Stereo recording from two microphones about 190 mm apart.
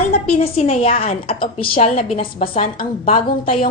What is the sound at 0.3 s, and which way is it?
A woman's voice, 30° left (ahead or behind).